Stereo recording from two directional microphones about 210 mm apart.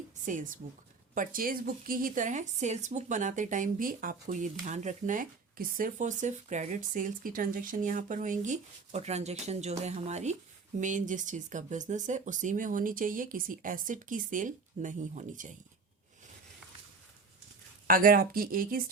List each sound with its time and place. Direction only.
0.3 s a woman's voice: 35° right (ahead or behind)
17.8 s speech: 45° right (ahead or behind)